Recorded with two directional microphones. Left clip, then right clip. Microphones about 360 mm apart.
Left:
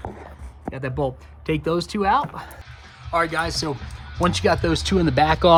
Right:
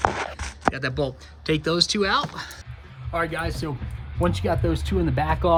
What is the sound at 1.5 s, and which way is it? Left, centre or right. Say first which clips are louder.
Speech: right 2 dB; centre.